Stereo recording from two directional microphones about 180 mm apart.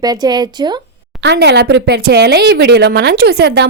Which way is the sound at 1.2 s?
70° right (ahead or behind).